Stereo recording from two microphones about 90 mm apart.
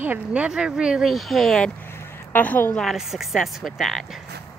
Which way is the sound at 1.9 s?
20° left (ahead or behind).